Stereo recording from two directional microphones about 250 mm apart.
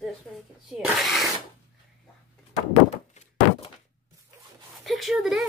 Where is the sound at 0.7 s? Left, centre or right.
Centre.